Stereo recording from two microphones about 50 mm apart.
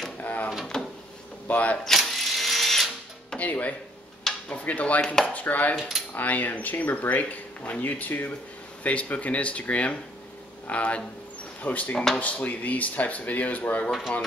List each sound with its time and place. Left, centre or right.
0.2 s drawer open or close: left
0.7 s drawer open or close: centre
1.5 s speech: left
1.9 s drill: centre
3.3 s speech: left
5.0 s speech: centre
5.3 s speech: left
8.8 s speech: left
13.8 s speech: centre